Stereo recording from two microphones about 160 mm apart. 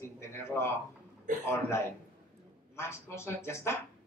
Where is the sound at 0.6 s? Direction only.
15° left (ahead or behind).